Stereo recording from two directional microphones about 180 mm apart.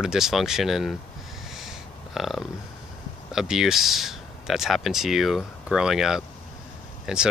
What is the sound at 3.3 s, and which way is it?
Speech, centre (ahead or behind).